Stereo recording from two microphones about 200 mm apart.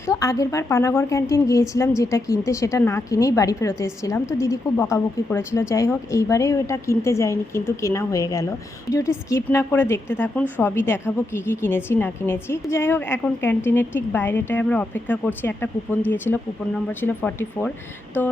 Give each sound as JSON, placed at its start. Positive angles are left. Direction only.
{"t": 0.1, "sound": "a woman's voice", "side_deg": 15}